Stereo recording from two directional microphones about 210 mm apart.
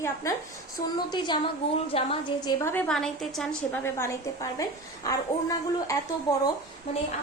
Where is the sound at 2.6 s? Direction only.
10° left (ahead or behind).